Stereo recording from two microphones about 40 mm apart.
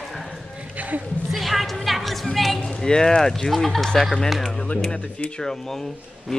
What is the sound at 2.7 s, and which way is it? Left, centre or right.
Speech, centre.